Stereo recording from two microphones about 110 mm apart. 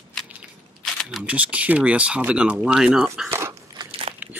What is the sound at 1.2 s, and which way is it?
Speech, 10° right (ahead or behind).